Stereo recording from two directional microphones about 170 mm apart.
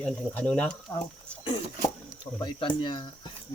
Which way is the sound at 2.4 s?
30° left (ahead or behind).